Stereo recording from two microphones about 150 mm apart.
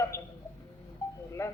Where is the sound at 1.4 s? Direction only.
20° left (ahead or behind).